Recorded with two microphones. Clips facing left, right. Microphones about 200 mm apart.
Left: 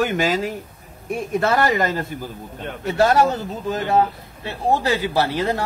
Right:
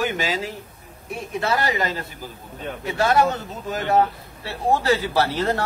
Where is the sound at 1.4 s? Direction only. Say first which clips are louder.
Left 3 dB; 50° left (ahead or behind); by 3.8 s 30° left (ahead or behind).